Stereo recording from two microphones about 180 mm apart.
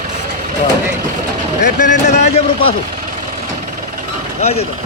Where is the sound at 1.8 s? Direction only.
40° left (ahead or behind).